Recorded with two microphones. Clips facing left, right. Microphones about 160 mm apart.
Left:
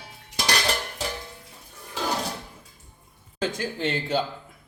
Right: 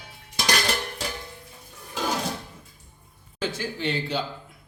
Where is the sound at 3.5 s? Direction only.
45° left (ahead or behind).